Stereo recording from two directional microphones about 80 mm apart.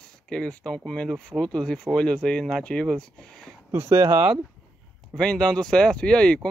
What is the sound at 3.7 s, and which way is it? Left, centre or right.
Speech, right.